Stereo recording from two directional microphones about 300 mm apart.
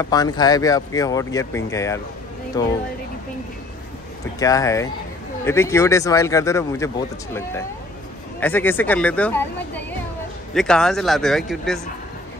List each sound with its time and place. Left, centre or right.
0.0 s speech: centre
4.4 s speech: centre